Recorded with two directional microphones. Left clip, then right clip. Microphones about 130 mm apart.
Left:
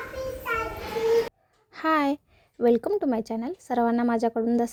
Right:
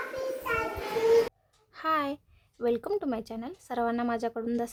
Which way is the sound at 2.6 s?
35° left (ahead or behind).